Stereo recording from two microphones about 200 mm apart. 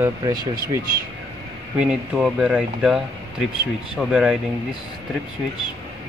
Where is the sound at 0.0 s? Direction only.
20° right (ahead or behind).